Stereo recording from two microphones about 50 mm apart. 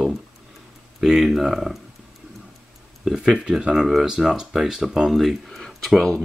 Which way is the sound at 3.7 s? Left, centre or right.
Centre.